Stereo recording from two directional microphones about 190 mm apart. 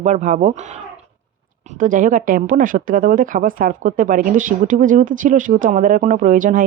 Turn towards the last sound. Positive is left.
turn(degrees=-45)  # may be behind; listen again after turning